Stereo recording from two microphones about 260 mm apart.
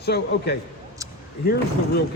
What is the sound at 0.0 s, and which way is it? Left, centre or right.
Speech, left.